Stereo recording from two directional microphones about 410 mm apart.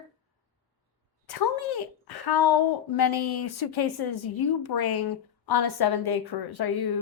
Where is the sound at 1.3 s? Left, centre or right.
Left.